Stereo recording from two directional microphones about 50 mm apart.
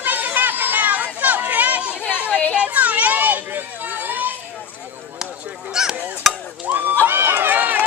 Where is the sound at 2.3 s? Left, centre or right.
Left.